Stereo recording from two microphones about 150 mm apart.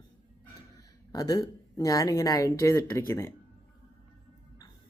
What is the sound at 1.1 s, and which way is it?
Speech, 25° left (ahead or behind).